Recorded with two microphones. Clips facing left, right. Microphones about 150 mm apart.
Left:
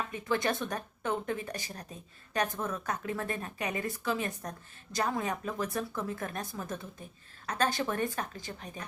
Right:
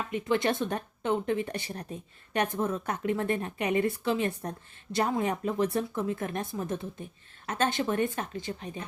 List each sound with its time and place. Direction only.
0.1 s a woman's voice: 25° right (ahead or behind)